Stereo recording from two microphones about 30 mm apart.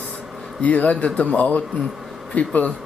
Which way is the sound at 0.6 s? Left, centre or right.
Left.